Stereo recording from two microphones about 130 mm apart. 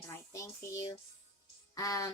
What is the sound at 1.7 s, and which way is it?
Speech, 25° left (ahead or behind).